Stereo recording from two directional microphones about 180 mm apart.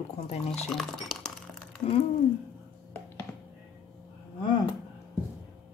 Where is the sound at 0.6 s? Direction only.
5° left (ahead or behind).